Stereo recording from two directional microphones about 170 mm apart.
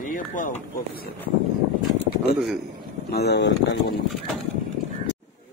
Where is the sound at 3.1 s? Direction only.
80° left.